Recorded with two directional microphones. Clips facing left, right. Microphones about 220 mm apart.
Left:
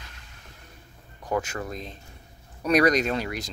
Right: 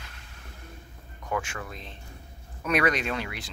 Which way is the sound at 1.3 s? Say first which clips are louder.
Left 4 dB; 35° left (ahead or behind).